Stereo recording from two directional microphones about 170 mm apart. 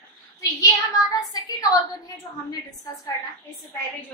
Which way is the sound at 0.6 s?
20° left (ahead or behind).